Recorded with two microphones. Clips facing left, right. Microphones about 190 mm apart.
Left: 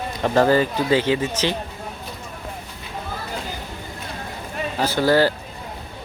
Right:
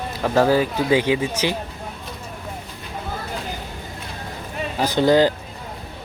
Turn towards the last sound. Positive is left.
turn(degrees=-20)  # may be behind; listen again after turning